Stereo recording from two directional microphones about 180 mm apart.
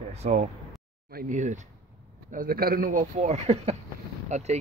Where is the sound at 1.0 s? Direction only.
50° right (ahead or behind).